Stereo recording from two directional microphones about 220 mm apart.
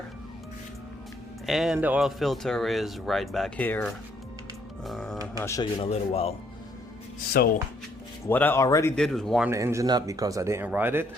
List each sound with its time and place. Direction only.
1.5 s speech: centre (ahead or behind)
4.9 s music: centre (ahead or behind)
5.4 s speech: 15° left (ahead or behind)
5.8 s a man's voice: 25° left (ahead or behind)
7.3 s speech: 45° left (ahead or behind)
8.3 s speech: 10° left (ahead or behind)
9.0 s speech: centre (ahead or behind)
9.5 s speech: 15° right (ahead or behind)